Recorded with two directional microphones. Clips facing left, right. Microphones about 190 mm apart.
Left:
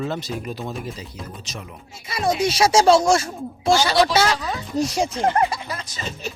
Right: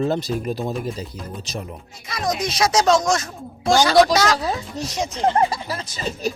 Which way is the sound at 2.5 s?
30° left (ahead or behind).